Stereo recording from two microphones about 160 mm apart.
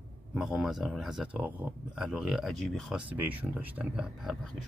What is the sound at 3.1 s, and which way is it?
Speech, 10° right (ahead or behind).